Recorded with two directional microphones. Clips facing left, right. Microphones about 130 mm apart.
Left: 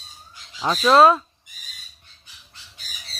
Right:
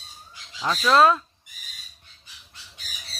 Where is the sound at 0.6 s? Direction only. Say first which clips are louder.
Left 4 dB; 25° left (ahead or behind).